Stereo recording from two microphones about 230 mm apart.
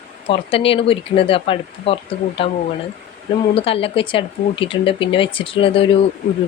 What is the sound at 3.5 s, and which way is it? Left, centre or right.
Speech, left.